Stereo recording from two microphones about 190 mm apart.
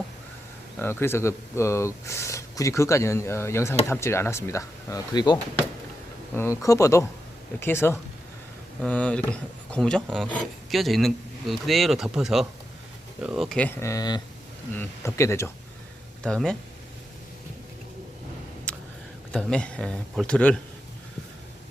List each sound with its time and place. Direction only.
0.8 s speech: 10° left (ahead or behind)
16.2 s speech: 5° left (ahead or behind)
19.3 s speech: 5° left (ahead or behind)